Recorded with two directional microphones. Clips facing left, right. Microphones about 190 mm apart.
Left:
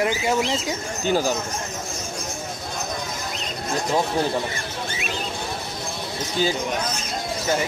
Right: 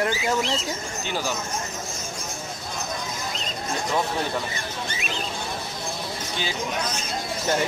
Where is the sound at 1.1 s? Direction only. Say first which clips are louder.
Left 8 dB; 45° left (ahead or behind).